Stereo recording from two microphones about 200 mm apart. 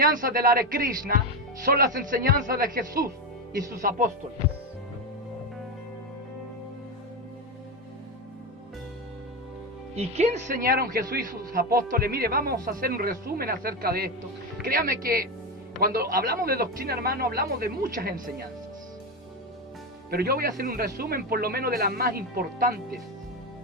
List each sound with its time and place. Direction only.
0.0 s a man's voice: 45° right (ahead or behind)
9.9 s a man's voice: 30° right (ahead or behind)
20.1 s a man's voice: 50° right (ahead or behind)